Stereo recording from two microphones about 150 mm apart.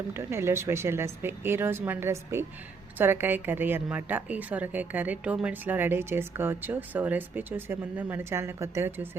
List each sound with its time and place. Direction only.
0.1 s a woman's voice: 15° right (ahead or behind)